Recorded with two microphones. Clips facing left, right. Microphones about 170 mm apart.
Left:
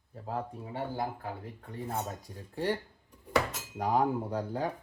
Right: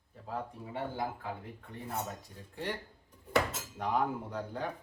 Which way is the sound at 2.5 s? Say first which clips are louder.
Left 7 dB; 40° left (ahead or behind).